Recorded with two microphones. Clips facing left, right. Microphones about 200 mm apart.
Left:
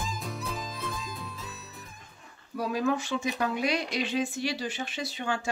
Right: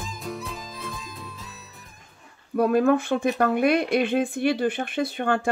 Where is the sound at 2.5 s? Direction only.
55° right (ahead or behind).